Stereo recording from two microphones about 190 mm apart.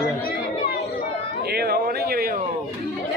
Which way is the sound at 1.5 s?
55° right (ahead or behind).